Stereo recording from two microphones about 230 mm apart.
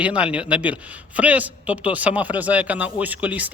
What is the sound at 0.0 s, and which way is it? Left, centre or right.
A man's voice, centre.